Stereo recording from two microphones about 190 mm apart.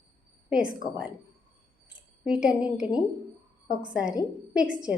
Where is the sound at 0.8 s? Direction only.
20° left (ahead or behind).